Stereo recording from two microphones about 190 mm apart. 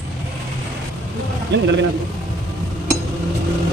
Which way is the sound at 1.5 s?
65° right (ahead or behind).